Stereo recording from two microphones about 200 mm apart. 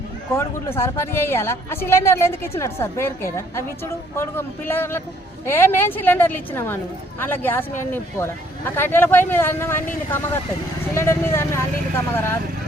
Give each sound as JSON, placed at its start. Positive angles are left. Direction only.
{"t": 0.3, "sound": "speech", "side_deg": 15}
{"t": 10.9, "sound": "speech", "side_deg": 15}